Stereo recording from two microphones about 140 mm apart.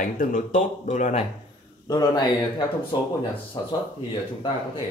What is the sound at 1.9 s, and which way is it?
Speech, 30° left (ahead or behind).